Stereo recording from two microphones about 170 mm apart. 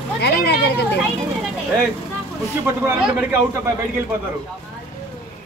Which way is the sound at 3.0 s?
10° right (ahead or behind).